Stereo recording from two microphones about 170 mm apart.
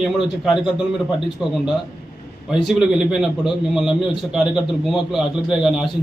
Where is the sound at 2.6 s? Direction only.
5° right (ahead or behind).